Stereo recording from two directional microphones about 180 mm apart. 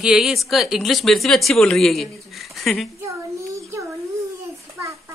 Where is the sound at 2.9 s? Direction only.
15° right (ahead or behind).